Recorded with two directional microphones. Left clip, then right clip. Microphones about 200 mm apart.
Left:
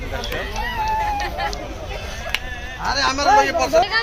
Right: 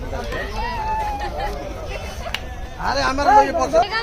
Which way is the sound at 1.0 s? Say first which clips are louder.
Left 2 dB; 20° right (ahead or behind).